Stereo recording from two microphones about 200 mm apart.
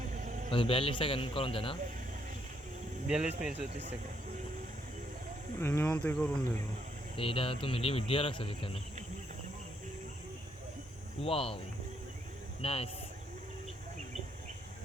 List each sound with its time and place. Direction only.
0.1 s a sound: 40° right (ahead or behind)
0.5 s speech: 25° left (ahead or behind)
3.1 s speech: 5° right (ahead or behind)
5.5 s speech: 10° left (ahead or behind)
7.2 s speech: 25° left (ahead or behind)
11.2 s speech: 30° left (ahead or behind)
12.6 s speech: 30° left (ahead or behind)